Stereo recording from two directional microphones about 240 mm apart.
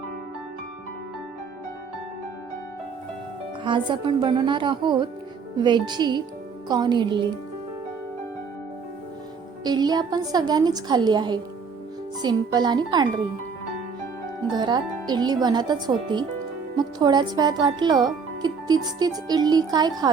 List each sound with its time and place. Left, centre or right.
3.6 s speech: centre
9.6 s speech: centre
14.5 s speech: centre